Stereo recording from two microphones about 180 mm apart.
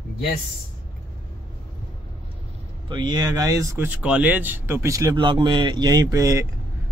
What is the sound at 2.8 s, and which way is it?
Speech, 25° right (ahead or behind).